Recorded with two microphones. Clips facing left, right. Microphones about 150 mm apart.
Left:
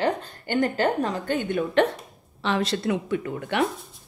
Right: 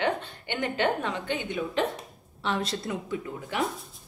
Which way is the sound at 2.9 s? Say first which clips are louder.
Left 7 dB; 70° left (ahead or behind).